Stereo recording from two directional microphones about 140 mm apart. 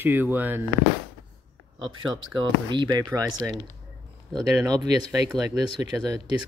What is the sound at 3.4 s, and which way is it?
Speech, 10° right (ahead or behind).